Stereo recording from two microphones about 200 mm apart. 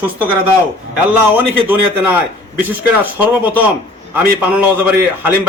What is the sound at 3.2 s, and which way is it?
Speech, 10° right (ahead or behind).